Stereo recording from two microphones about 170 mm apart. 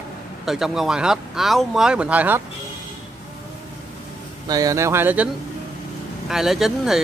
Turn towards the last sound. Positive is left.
turn(degrees=0)  # may be behind; listen again after turning